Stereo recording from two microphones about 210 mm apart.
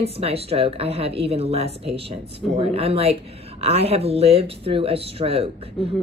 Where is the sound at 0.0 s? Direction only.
30° right (ahead or behind).